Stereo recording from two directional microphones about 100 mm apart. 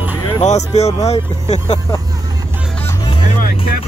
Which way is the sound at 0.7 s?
90° left.